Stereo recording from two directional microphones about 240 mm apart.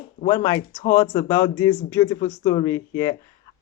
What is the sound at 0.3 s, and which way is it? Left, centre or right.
Speech, centre.